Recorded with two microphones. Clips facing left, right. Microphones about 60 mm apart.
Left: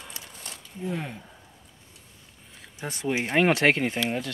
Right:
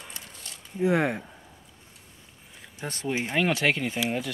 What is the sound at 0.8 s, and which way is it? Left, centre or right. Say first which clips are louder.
Speech: right 9 dB; right.